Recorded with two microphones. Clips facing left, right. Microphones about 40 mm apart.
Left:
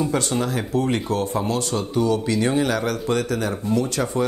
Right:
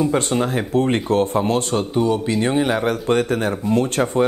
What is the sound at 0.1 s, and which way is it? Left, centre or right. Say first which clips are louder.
Speech: right 3 dB; right.